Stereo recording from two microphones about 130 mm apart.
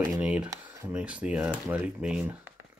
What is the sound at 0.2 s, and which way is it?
Speech, 10° right (ahead or behind).